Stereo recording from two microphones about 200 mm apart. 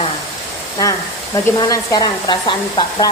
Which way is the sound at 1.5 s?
20° left (ahead or behind).